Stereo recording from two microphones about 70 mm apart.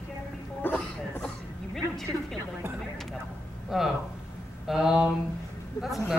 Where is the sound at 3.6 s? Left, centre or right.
Centre.